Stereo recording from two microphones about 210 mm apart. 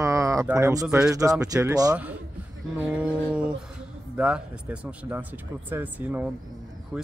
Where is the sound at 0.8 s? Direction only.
5° right (ahead or behind).